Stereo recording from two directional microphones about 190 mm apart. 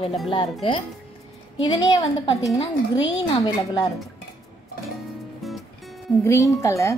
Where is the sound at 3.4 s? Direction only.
20° left (ahead or behind).